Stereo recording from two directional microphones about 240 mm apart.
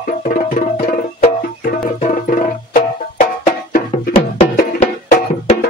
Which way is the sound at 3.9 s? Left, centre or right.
Left.